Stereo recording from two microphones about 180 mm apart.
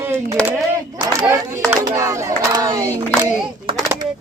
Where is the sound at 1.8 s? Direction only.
20° right (ahead or behind).